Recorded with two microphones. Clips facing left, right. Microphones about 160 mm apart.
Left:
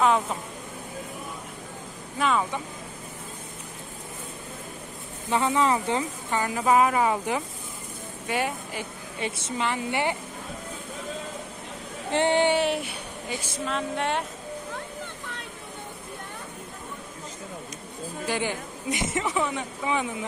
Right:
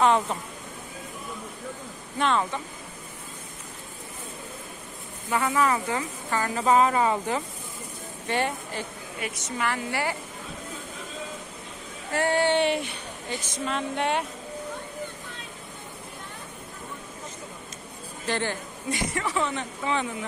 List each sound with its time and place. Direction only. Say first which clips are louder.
0.0 s a woman's voice: right 1 dB; centre (ahead or behind)
2.1 s speech: even; 5° left (ahead or behind)
5.3 s speech: left 1 dB; 25° left (ahead or behind)
9.2 s speech: left 1 dB; 25° left (ahead or behind)
12.1 s speech: left 2 dB; 20° left (ahead or behind)
12.5 s a woman's voice: right 1 dB; centre (ahead or behind)
13.7 s speech: right 1 dB; centre (ahead or behind)
18.2 s speech: even; 10° left (ahead or behind)